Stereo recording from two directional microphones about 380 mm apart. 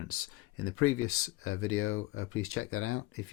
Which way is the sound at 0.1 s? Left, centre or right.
Left.